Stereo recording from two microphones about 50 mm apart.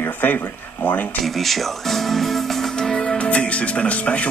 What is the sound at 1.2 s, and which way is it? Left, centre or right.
Speech, centre.